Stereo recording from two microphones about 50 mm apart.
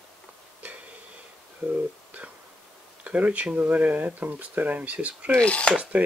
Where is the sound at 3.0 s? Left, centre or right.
Right.